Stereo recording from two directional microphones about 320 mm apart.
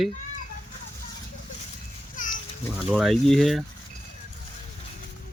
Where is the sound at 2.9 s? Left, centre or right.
Centre.